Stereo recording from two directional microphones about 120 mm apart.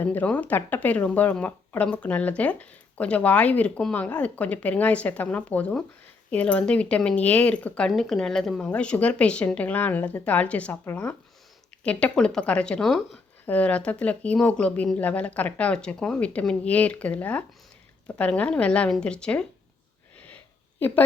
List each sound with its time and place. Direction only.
0.0 s speech: 15° left (ahead or behind)
20.7 s speech: 15° left (ahead or behind)